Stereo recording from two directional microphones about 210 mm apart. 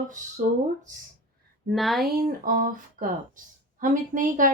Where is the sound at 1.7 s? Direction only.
Centre (ahead or behind).